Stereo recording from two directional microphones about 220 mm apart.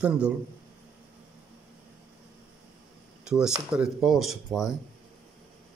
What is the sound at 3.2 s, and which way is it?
Speech, 5° right (ahead or behind).